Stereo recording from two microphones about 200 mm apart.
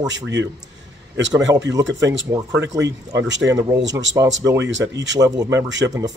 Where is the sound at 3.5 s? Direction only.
20° right (ahead or behind).